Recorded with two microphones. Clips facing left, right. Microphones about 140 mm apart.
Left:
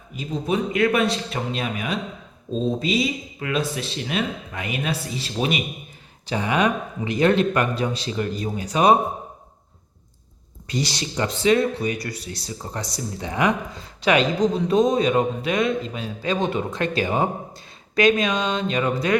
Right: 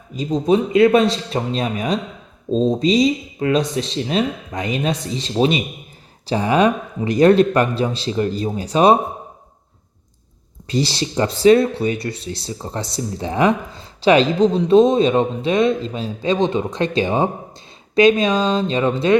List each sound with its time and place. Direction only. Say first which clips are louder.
0.2 s speech: right 8 dB; 40° right (ahead or behind)
0.4 s speech: right 7 dB; 25° right (ahead or behind)
10.7 s speech: right 6 dB; 30° right (ahead or behind)